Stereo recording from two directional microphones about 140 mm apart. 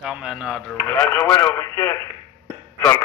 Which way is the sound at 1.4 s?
20° left (ahead or behind).